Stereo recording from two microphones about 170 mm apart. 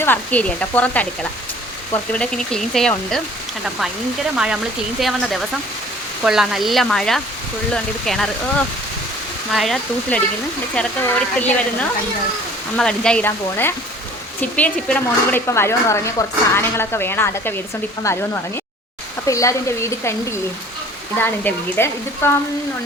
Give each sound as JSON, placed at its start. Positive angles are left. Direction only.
{"t": 0.0, "sound": "speech", "side_deg": 10}
{"t": 4.4, "sound": "speech", "side_deg": -5}
{"t": 19.3, "sound": "speech", "side_deg": 20}